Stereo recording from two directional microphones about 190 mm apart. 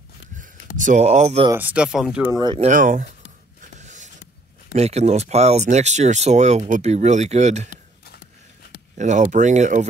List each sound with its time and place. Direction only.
0.4 s speech: 40° right (ahead or behind)
1.5 s speech: 10° right (ahead or behind)
2.2 s speech: 15° right (ahead or behind)
2.7 s speech: 40° right (ahead or behind)
3.8 s a sound: 40° right (ahead or behind)
4.7 s speech: 35° right (ahead or behind)
8.9 s speech: 40° right (ahead or behind)